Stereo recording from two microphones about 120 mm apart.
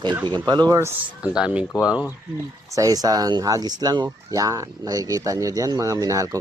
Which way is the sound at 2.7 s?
30° right (ahead or behind).